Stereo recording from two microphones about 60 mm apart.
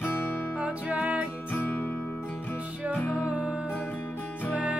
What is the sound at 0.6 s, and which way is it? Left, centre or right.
Music, centre.